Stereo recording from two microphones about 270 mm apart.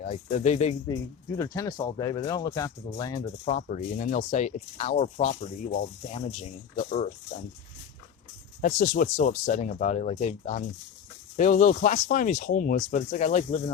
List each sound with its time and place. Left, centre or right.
0.0 s speech: left
1.4 s speech: centre
3.4 s speech: left
8.6 s speech: left